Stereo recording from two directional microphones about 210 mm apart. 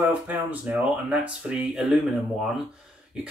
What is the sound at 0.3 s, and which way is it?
Speech, 10° right (ahead or behind).